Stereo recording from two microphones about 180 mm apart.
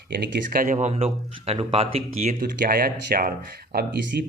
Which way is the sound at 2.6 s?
55° right (ahead or behind).